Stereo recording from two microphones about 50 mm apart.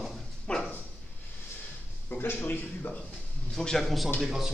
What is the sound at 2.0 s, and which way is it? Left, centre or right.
Speech, left.